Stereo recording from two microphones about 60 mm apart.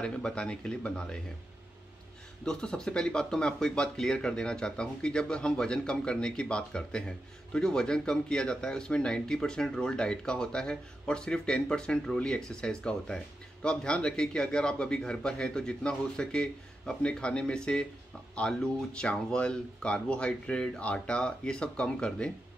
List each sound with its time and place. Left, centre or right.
0.0 s speech: centre
2.4 s speech: centre